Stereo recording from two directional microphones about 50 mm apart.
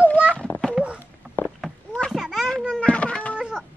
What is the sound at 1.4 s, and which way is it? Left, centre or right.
Cat, left.